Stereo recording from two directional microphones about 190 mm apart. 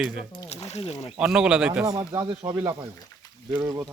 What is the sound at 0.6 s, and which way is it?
Speech, 35° left (ahead or behind).